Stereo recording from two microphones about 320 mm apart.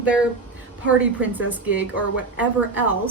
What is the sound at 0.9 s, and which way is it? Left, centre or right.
A woman's voice, centre.